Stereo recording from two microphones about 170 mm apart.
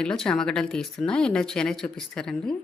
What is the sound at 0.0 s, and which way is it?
Speech, 5° left (ahead or behind).